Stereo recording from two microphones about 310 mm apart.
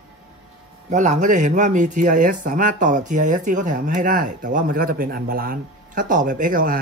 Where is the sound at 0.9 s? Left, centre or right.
Right.